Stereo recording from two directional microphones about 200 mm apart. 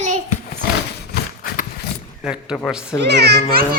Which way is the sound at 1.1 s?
45° left (ahead or behind).